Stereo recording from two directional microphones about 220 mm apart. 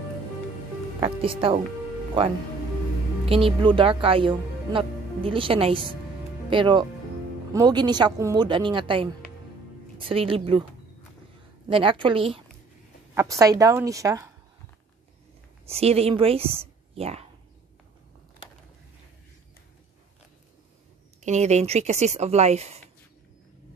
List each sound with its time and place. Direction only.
1.0 s speech: 25° right (ahead or behind)
3.3 s speech: 25° right (ahead or behind)
11.6 s a woman's voice: 25° right (ahead or behind)
15.7 s speech: 30° right (ahead or behind)
21.2 s speech: 30° right (ahead or behind)